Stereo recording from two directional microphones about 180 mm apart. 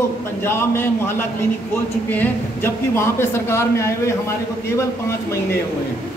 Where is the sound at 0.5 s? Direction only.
15° left (ahead or behind).